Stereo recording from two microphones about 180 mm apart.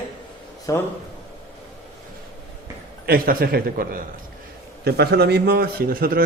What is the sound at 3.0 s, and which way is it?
A man's voice, 55° right (ahead or behind).